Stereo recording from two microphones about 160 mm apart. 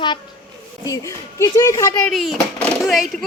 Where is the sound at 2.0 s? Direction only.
Centre (ahead or behind).